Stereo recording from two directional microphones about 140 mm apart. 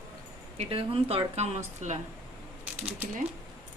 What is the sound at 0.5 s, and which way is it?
Speech, 40° right (ahead or behind).